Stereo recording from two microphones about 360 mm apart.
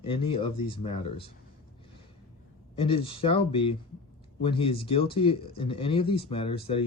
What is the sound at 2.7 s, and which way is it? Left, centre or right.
Speech, centre.